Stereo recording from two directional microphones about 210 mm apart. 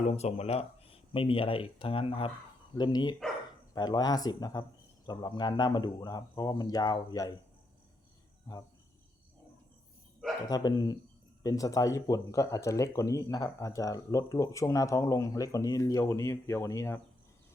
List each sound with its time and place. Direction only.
0.1 s speech: 30° left (ahead or behind)
10.5 s speech: 20° left (ahead or behind)